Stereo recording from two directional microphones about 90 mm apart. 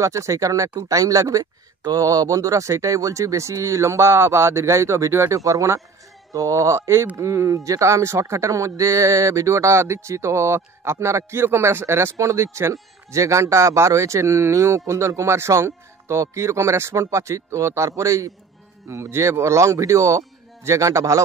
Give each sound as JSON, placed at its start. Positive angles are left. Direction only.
{"t": 0.0, "sound": "speech", "side_deg": -35}